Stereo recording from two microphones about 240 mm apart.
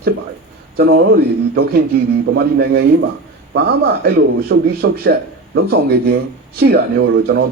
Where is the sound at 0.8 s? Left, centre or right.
Right.